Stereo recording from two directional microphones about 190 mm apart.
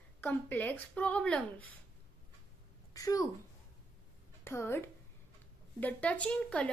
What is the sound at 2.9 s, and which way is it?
Speech, 20° left (ahead or behind).